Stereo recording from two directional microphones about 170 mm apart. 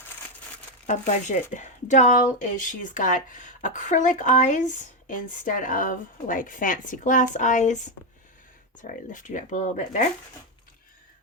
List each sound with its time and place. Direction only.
0.9 s speech: 45° left (ahead or behind)
8.8 s speech: 50° left (ahead or behind)